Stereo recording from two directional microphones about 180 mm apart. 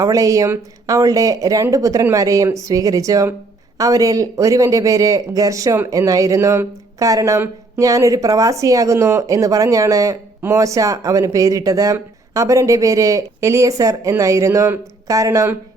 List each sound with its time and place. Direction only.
0.0 s speech: 20° right (ahead or behind)